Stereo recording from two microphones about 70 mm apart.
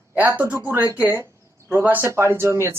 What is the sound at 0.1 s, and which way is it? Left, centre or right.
Speech, right.